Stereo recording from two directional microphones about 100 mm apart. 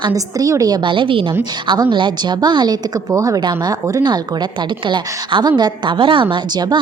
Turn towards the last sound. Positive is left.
turn(degrees=-45)  # may be behind; listen again after turning